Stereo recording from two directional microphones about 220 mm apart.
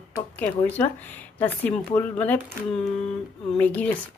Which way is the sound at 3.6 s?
5° left (ahead or behind).